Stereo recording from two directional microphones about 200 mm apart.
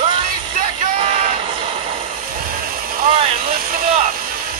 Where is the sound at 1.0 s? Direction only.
35° right (ahead or behind).